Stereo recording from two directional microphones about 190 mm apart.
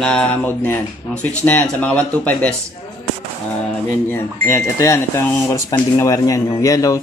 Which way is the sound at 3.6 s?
10° left (ahead or behind).